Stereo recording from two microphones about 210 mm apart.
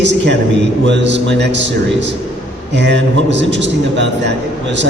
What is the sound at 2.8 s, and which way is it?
A man's voice, 55° right (ahead or behind).